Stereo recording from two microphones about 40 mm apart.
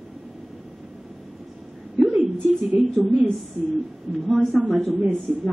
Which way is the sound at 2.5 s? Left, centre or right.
Centre.